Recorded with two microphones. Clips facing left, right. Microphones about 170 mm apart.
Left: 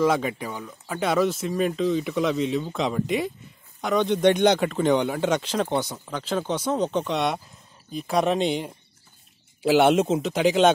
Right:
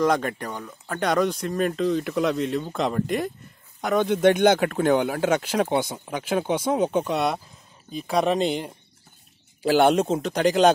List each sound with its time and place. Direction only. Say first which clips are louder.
0.0 s speech: even; 5° left (ahead or behind)